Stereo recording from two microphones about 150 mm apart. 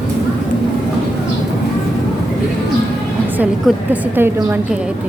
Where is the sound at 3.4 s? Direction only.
10° right (ahead or behind).